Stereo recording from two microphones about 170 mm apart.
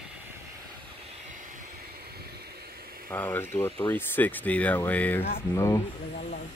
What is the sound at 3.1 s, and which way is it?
Speech, 10° left (ahead or behind).